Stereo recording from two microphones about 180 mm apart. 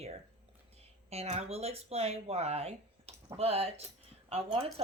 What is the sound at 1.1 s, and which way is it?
Speech, 35° right (ahead or behind).